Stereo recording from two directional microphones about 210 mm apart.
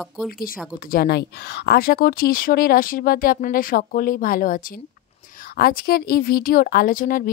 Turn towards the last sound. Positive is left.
turn(degrees=40)  # may be behind; listen again after turning